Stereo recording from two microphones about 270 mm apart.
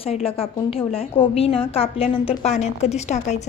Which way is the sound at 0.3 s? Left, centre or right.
Left.